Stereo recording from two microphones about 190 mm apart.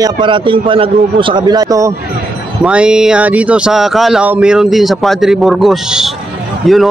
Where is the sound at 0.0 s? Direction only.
25° right (ahead or behind).